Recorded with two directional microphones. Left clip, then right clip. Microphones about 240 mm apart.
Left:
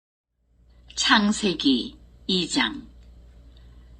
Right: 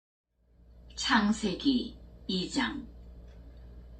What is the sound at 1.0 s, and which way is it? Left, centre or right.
A woman's voice, left.